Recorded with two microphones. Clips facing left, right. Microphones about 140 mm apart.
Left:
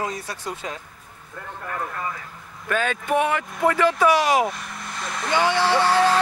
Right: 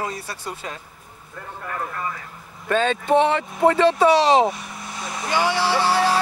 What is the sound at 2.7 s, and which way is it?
Speech, 25° right (ahead or behind).